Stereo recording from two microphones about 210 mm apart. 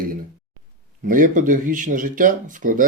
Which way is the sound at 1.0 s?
40° right (ahead or behind).